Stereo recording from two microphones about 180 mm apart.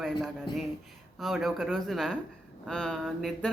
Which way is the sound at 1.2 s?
Centre (ahead or behind).